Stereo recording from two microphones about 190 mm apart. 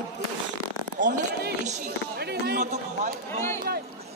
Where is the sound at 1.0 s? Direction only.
45° right (ahead or behind).